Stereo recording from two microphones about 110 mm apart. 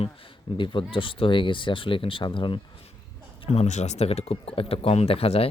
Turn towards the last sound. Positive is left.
turn(degrees=65)  # may be behind; listen again after turning